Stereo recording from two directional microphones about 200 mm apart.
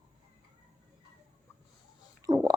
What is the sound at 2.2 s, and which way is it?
Stomach rumble, 15° right (ahead or behind).